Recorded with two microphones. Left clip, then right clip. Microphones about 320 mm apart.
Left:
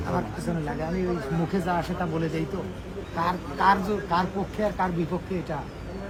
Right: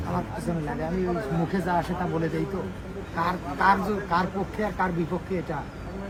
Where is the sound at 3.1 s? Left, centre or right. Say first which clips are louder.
Even; centre.